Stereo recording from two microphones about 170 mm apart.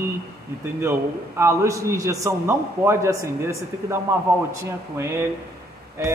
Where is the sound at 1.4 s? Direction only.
15° right (ahead or behind).